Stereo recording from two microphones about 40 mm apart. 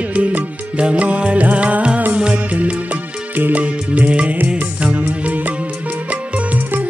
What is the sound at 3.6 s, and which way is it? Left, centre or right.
Music, right.